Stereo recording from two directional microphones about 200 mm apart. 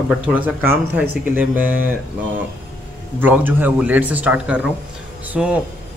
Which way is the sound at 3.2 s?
10° right (ahead or behind).